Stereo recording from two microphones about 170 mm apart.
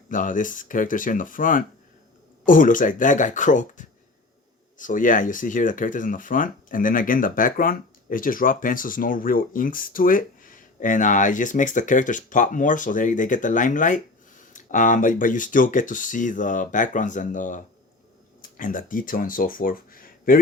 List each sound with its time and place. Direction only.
0.1 s speech: 50° left (ahead or behind)